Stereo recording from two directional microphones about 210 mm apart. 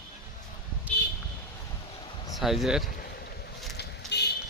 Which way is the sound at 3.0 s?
45° left (ahead or behind).